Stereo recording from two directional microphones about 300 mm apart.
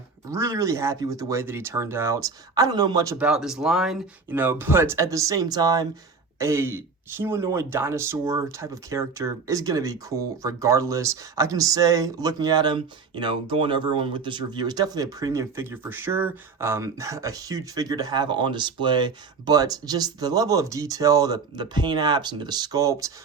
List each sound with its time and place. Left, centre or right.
0.3 s speech: centre